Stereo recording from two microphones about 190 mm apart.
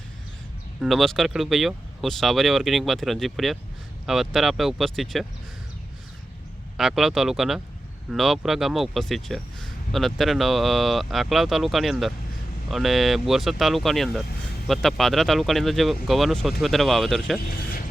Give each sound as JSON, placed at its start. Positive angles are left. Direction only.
{"t": 0.8, "sound": "speech", "side_deg": 0}
{"t": 6.7, "sound": "speech", "side_deg": 0}
{"t": 17.5, "sound": "vehicle", "side_deg": 50}